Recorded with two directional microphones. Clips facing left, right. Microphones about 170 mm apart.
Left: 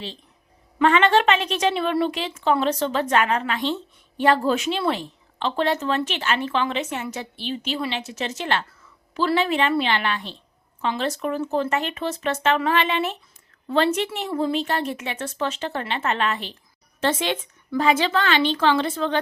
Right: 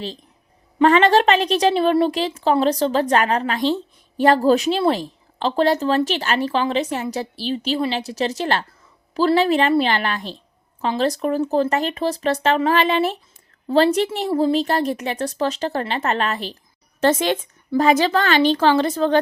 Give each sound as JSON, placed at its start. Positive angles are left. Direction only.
{"t": 0.8, "sound": "a woman's voice", "side_deg": -35}